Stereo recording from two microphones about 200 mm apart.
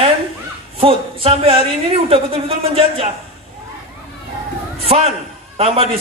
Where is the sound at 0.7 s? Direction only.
30° right (ahead or behind).